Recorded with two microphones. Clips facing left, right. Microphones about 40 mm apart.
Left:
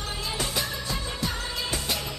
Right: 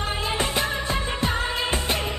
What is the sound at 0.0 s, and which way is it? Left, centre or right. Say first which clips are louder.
Music: right 6 dB; right.